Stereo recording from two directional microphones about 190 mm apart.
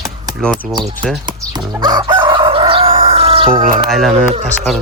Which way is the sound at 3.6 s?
45° right (ahead or behind).